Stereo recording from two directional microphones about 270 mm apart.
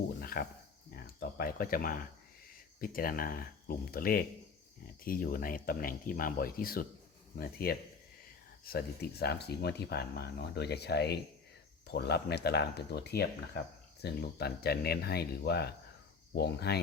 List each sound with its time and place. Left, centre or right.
0.2 s cricket: left
1.2 s speech: left